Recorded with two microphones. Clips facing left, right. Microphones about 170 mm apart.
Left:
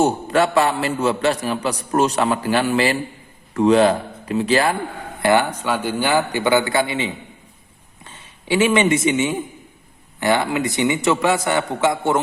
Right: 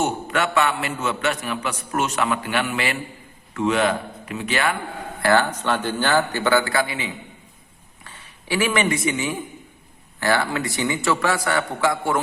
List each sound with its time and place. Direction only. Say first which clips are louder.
0.0 s a man's voice: left 6 dB; 35° left (ahead or behind)
5.2 s a man's voice: left 2 dB; 15° left (ahead or behind)